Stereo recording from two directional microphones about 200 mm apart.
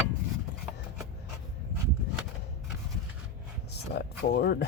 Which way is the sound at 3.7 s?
55° left (ahead or behind).